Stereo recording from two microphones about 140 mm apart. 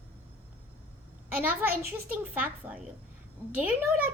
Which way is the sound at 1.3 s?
10° right (ahead or behind).